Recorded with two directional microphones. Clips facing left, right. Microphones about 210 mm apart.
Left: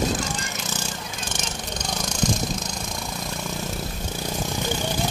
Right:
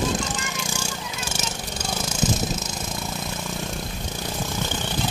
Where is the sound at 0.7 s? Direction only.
10° right (ahead or behind).